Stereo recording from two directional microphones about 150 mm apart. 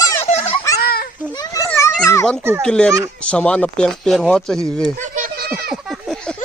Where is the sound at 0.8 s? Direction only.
90° left.